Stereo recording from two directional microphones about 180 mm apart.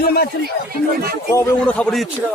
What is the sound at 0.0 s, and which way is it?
Speech, 60° left (ahead or behind).